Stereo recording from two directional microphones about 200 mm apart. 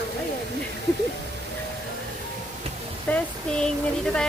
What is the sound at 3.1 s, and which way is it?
Speech, 5° left (ahead or behind).